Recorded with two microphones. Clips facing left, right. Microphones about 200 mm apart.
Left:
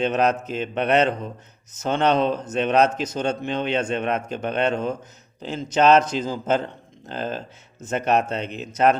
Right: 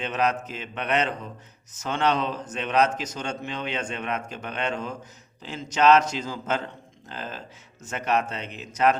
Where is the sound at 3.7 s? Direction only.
45° left (ahead or behind).